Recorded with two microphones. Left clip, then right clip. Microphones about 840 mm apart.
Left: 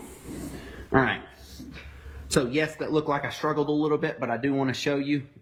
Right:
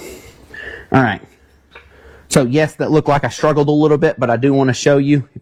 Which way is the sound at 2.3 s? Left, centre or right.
Right.